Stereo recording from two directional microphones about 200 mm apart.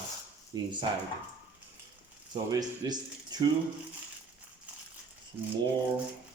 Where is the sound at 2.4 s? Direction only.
20° right (ahead or behind).